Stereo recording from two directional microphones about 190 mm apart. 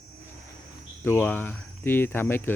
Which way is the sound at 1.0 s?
10° left (ahead or behind).